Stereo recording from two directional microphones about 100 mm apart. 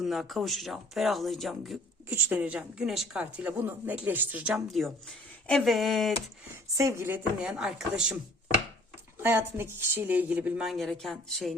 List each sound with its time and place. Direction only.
0.0 s speech: centre (ahead or behind)
2.0 s a woman's voice: 20° right (ahead or behind)
4.5 s speech: centre (ahead or behind)
6.7 s speech: 30° right (ahead or behind)
7.4 s a woman's voice: 10° right (ahead or behind)
9.2 s speech: 25° right (ahead or behind)
10.6 s speech: centre (ahead or behind)